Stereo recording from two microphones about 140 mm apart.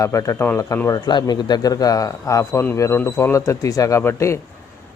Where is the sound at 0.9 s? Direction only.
30° left (ahead or behind).